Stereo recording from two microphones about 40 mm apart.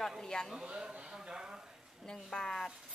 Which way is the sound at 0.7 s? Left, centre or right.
Right.